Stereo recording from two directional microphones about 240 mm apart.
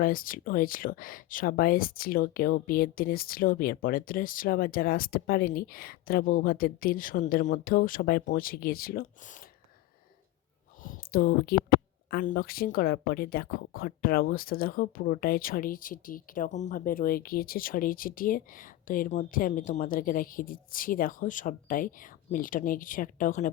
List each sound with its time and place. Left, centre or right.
0.0 s speech: left
10.8 s a sound: left
12.1 s speech: left